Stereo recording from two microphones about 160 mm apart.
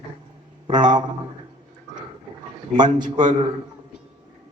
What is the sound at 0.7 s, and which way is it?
Speech, 25° right (ahead or behind).